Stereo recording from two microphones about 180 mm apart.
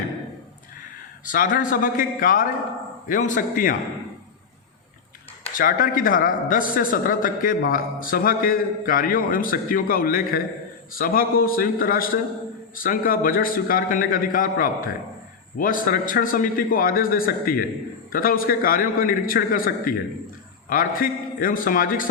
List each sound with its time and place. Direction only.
1.2 s speech: 50° left (ahead or behind)
5.5 s speech: 50° left (ahead or behind)